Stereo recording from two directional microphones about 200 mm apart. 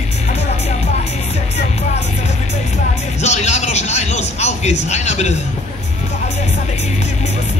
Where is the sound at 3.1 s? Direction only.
35° left (ahead or behind).